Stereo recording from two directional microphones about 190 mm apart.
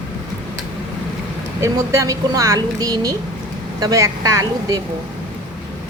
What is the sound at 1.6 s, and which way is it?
A woman's voice, 15° right (ahead or behind).